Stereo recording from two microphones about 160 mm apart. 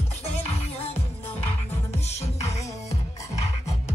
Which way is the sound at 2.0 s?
45° left (ahead or behind).